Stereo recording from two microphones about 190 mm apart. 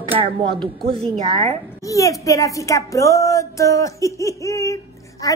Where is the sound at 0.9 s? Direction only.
35° right (ahead or behind).